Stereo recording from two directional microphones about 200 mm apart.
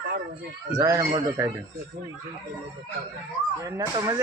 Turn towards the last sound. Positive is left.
turn(degrees=-20)  # may be behind; listen again after turning